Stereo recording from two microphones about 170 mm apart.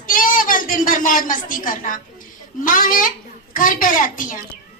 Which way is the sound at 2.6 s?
55° left (ahead or behind).